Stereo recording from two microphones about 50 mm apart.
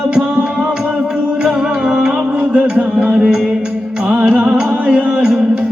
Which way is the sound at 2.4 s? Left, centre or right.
Right.